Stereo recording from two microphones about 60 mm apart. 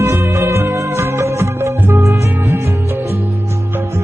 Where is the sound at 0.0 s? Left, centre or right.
Right.